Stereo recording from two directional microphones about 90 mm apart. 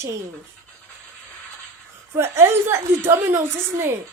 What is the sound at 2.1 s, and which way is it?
A woman's voice, 30° right (ahead or behind).